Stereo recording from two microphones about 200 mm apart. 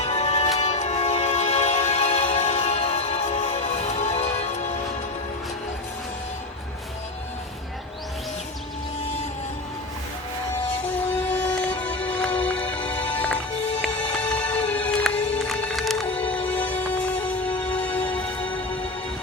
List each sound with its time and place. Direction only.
0.0 s music: 35° left (ahead or behind)
10.8 s music: 10° left (ahead or behind)